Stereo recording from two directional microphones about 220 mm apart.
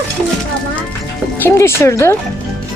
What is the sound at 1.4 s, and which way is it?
Speech, 10° left (ahead or behind).